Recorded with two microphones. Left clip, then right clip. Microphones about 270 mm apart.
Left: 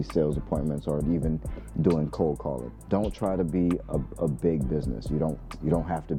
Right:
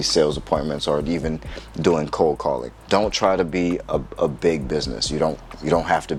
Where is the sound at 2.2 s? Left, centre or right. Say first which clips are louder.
Right 10 dB; centre.